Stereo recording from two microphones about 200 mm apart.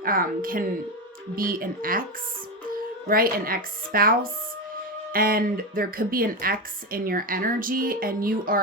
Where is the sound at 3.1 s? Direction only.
45° right (ahead or behind).